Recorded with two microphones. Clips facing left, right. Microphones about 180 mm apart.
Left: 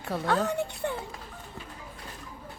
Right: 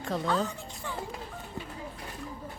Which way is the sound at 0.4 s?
65° left (ahead or behind).